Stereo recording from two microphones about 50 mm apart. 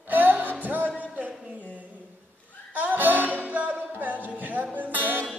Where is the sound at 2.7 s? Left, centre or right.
Right.